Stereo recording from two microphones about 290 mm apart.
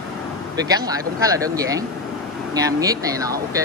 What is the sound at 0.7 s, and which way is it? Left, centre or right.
Speech, centre.